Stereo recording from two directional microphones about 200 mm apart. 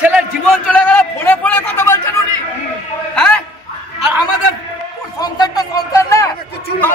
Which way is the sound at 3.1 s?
5° left (ahead or behind).